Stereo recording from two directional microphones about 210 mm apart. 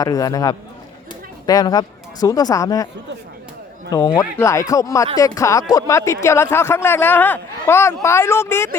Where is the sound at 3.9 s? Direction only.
20° left (ahead or behind).